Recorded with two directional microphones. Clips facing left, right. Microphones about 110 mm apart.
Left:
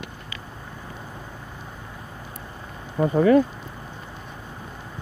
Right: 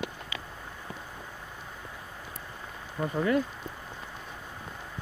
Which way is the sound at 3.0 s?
75° left (ahead or behind).